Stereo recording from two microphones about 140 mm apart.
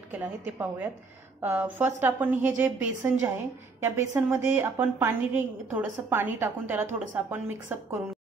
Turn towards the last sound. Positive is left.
turn(degrees=-15)  # may be behind; listen again after turning